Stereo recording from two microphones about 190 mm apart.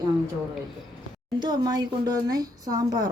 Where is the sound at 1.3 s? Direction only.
20° right (ahead or behind).